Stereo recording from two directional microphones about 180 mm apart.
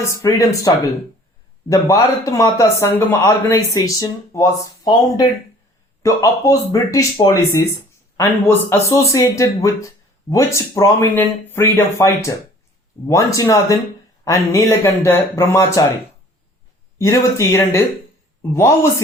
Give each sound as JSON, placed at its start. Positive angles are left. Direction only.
{"t": 0.2, "sound": "speech", "side_deg": 20}
{"t": 1.7, "sound": "a man's voice", "side_deg": 20}
{"t": 17.0, "sound": "a man's voice", "side_deg": 15}